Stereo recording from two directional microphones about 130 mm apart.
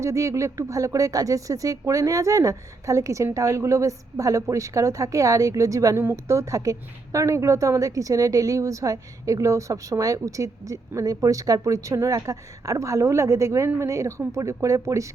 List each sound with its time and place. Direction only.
0.0 s speech: 25° right (ahead or behind)